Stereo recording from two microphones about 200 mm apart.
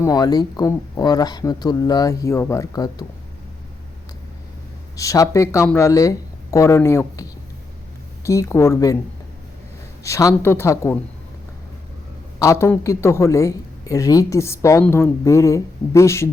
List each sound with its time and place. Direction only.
0.0 s speech: 20° left (ahead or behind)
4.9 s a man's voice: 15° left (ahead or behind)
10.0 s a man's voice: 15° left (ahead or behind)
12.4 s a man's voice: 15° left (ahead or behind)